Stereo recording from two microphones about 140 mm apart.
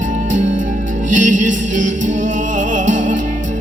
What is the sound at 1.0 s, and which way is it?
Music, 65° right (ahead or behind).